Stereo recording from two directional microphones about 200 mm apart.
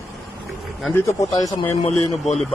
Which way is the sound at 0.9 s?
15° left (ahead or behind).